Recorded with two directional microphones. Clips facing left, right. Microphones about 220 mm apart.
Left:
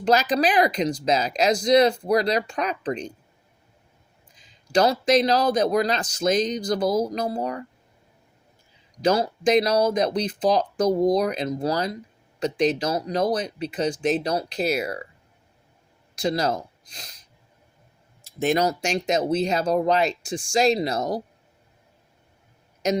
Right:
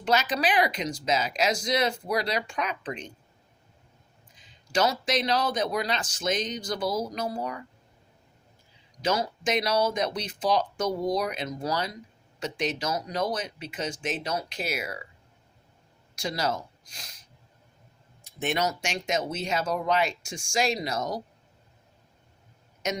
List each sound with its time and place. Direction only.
0.0 s speech: 35° left (ahead or behind)
4.7 s speech: 35° left (ahead or behind)
9.0 s speech: 35° left (ahead or behind)
16.2 s speech: 35° left (ahead or behind)
18.3 s speech: 40° left (ahead or behind)